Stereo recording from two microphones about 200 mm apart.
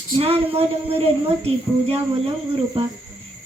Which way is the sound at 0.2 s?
30° right (ahead or behind).